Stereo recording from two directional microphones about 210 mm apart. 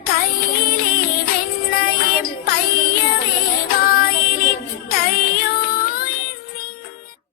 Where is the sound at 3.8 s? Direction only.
45° left (ahead or behind).